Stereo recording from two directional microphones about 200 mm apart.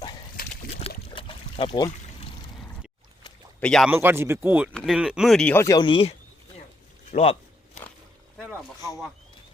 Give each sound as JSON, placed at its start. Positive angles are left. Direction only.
{"t": 0.4, "sound": "a sound", "side_deg": 45}
{"t": 0.8, "sound": "pour", "side_deg": 30}
{"t": 3.6, "sound": "speech", "side_deg": 5}
{"t": 3.8, "sound": "speech", "side_deg": -10}
{"t": 8.4, "sound": "speech", "side_deg": -5}